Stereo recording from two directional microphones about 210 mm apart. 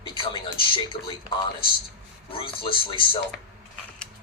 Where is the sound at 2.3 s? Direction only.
25° left (ahead or behind).